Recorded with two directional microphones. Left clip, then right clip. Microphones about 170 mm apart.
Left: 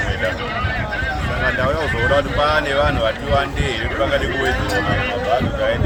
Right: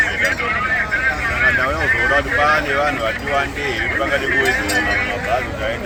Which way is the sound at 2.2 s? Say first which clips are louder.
Right 2 dB; 35° left (ahead or behind).